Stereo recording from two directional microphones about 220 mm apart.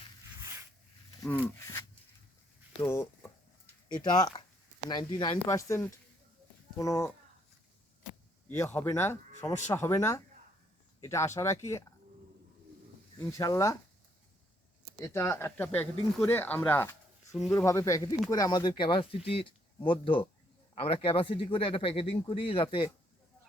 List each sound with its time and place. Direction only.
0.3 s zipper: 15° right (ahead or behind)
2.8 s a sound: 10° left (ahead or behind)
3.9 s speech: 20° left (ahead or behind)
8.4 s speech: 10° left (ahead or behind)
13.1 s speech: 15° left (ahead or behind)
14.9 s speech: 10° left (ahead or behind)